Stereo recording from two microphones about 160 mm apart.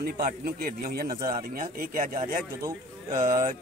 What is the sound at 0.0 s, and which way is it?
Speech, 65° right (ahead or behind).